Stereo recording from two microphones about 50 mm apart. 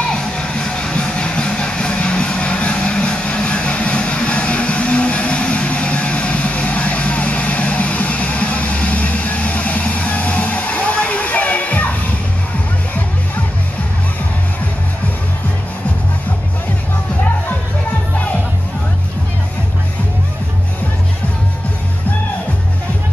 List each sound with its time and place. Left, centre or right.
0.0 s music: centre